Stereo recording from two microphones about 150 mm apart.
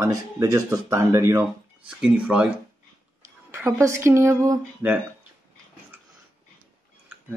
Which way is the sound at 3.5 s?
15° right (ahead or behind).